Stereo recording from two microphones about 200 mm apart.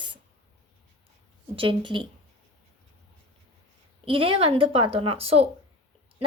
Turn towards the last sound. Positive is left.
turn(degrees=-30)  # may be behind; listen again after turning